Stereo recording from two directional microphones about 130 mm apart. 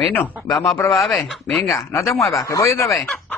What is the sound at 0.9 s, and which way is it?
Speech, centre (ahead or behind).